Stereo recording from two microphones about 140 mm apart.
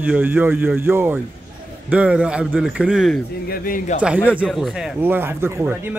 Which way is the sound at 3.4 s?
90° left.